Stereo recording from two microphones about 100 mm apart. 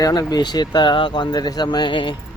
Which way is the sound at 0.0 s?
45° left (ahead or behind).